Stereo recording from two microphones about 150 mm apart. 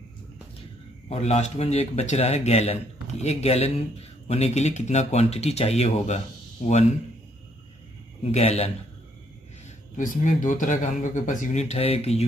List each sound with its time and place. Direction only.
1.0 s speech: 45° left (ahead or behind)
8.2 s speech: 45° left (ahead or behind)
9.9 s speech: 65° left (ahead or behind); by 12.3 s 45° left (ahead or behind)